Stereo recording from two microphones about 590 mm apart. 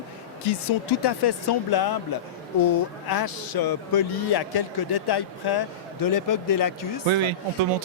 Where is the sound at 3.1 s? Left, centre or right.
Left.